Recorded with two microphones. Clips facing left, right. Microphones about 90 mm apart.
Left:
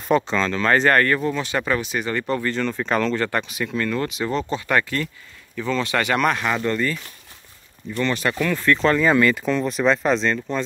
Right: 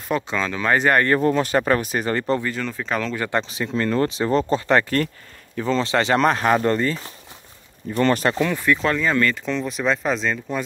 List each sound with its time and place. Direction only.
0.1 s speech: 5° right (ahead or behind)
1.2 s speech: 40° right (ahead or behind)
2.4 s speech: 5° right (ahead or behind)
3.2 s speech: 20° right (ahead or behind)
4.8 s speech: 45° right (ahead or behind)
5.6 s speech: 30° right (ahead or behind)
8.3 s speech: 20° right (ahead or behind)
8.7 s speech: centre (ahead or behind)